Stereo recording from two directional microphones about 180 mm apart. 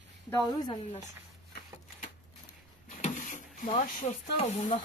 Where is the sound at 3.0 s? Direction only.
45° left (ahead or behind).